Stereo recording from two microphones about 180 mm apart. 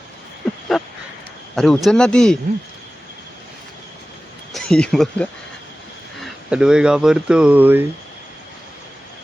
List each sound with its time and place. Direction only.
0.7 s a sound: centre (ahead or behind)
1.5 s speech: centre (ahead or behind)
4.5 s speech: 5° left (ahead or behind)